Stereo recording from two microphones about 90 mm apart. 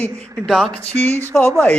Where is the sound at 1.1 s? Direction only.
30° right (ahead or behind).